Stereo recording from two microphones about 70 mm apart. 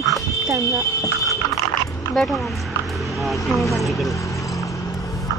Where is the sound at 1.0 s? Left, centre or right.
Left.